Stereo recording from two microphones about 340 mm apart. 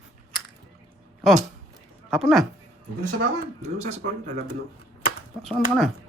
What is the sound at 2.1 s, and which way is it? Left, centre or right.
Speech, centre.